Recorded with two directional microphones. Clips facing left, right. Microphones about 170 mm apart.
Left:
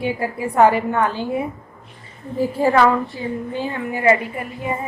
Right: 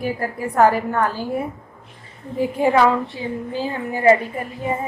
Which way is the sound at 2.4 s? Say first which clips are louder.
Left 1 dB; 15° right (ahead or behind).